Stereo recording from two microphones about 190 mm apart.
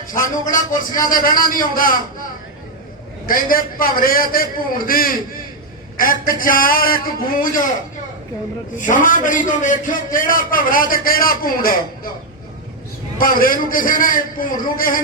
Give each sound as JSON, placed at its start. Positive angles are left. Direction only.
{"t": 0.1, "sound": "a man's voice", "side_deg": 45}
{"t": 3.2, "sound": "a man's voice", "side_deg": 50}
{"t": 8.8, "sound": "a man's voice", "side_deg": 45}
{"t": 13.1, "sound": "a man's voice", "side_deg": 50}